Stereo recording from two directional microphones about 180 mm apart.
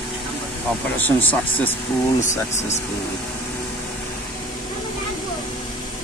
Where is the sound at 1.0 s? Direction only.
10° left (ahead or behind).